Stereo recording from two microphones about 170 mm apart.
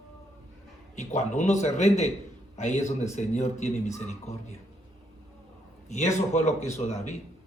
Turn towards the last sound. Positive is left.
turn(degrees=40)  # may be behind; listen again after turning